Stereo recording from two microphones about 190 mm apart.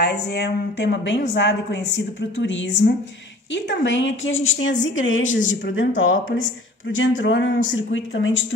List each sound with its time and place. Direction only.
0.0 s a woman's voice: 60° left (ahead or behind); by 8.5 s 80° left